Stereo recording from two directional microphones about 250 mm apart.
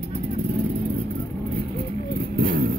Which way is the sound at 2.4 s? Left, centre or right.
Right.